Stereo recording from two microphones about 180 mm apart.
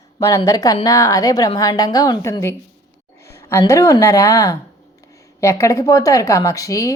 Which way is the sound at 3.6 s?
15° left (ahead or behind).